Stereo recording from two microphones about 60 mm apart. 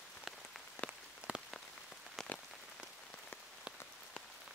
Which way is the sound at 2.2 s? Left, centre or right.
Centre.